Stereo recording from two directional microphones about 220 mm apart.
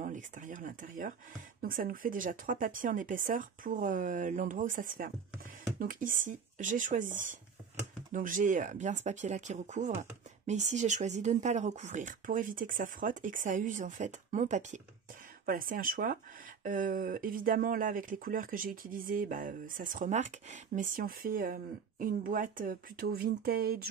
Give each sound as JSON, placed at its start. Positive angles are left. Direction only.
{"t": 0.0, "sound": "speech", "side_deg": -35}